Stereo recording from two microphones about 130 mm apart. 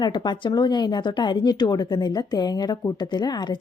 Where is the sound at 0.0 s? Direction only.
35° left (ahead or behind).